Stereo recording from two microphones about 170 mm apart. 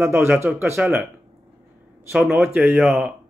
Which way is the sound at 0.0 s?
15° right (ahead or behind).